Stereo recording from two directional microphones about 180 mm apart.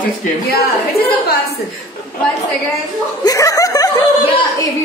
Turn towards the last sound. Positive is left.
turn(degrees=20)  # may be behind; listen again after turning